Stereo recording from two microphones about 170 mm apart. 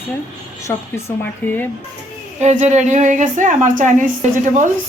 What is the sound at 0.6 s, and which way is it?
Speech, 15° left (ahead or behind).